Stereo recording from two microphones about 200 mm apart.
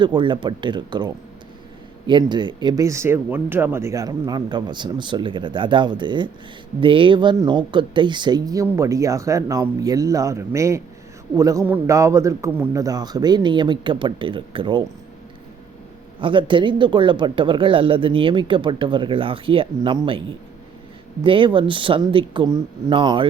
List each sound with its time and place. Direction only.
0.0 s speech: 25° right (ahead or behind)
16.2 s speech: 25° right (ahead or behind)
21.2 s speech: 25° right (ahead or behind)